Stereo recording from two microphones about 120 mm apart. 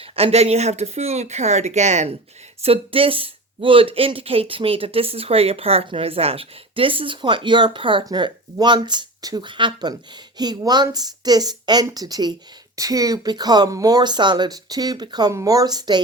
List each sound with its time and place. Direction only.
0.2 s speech: 60° right (ahead or behind)
2.6 s speech: 55° right (ahead or behind)
8.0 s speech: 35° right (ahead or behind)